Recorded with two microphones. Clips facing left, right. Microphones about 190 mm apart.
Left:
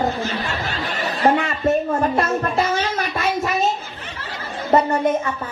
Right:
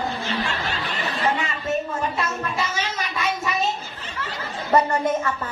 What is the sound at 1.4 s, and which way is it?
Speech, 55° left (ahead or behind).